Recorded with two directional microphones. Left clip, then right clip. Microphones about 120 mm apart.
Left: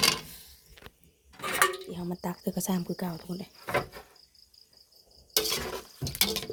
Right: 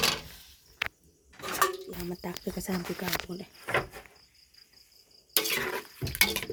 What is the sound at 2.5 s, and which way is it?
Speech, 20° left (ahead or behind).